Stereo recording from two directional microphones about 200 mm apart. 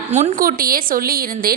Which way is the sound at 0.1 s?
35° right (ahead or behind).